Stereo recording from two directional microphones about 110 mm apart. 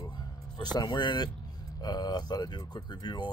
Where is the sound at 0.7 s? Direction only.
40° left (ahead or behind).